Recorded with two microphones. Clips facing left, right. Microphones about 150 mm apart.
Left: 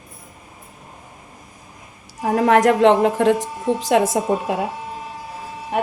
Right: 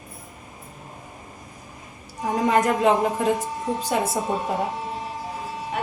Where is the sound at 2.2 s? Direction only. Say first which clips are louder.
Left 6 dB; 85° left.